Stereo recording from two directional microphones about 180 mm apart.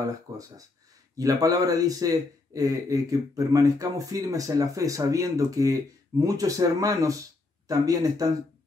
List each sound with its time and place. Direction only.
0.3 s a man's voice: 20° right (ahead or behind)